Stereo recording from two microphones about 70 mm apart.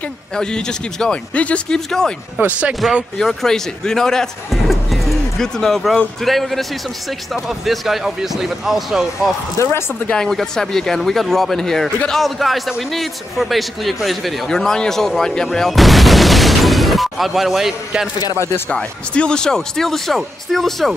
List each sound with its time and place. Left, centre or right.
0.4 s speech: centre
2.3 s speech: centre
3.2 s a man's voice: centre
9.6 s speech: left
10.0 s a man's voice: centre
18.3 s speech: left
18.7 s a man's voice: centre